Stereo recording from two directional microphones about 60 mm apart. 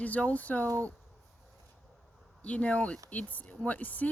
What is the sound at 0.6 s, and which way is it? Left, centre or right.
Speech, right.